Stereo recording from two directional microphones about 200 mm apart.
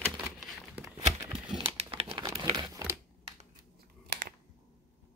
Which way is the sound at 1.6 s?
25° right (ahead or behind).